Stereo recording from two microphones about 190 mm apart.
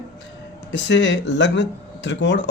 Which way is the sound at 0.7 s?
70° left (ahead or behind).